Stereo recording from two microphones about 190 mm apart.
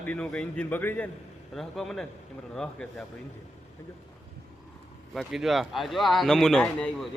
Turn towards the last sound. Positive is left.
turn(degrees=5)  # may be behind; listen again after turning